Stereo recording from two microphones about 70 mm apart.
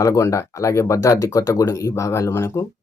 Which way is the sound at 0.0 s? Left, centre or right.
Left.